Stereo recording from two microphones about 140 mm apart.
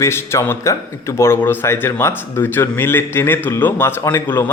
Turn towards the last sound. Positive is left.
turn(degrees=15)  # may be behind; listen again after turning